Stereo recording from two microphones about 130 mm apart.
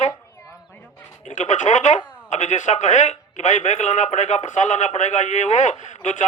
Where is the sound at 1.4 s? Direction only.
70° left (ahead or behind).